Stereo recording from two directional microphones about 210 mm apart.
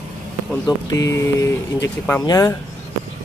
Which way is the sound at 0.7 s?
15° left (ahead or behind).